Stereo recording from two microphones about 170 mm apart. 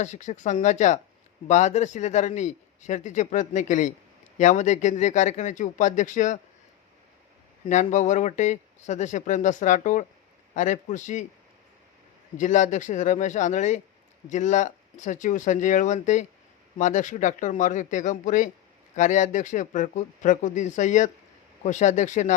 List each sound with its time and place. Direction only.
0.0 s a man's voice: 45° left (ahead or behind)
7.7 s a man's voice: 45° left (ahead or behind)
12.4 s a man's voice: 45° left (ahead or behind)